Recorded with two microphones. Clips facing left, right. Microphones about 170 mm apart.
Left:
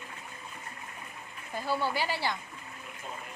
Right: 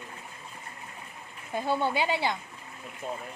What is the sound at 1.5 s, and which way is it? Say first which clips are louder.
Speech: right 3 dB; 20° right (ahead or behind).